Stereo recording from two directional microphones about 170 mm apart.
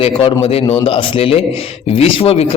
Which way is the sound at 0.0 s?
30° left (ahead or behind).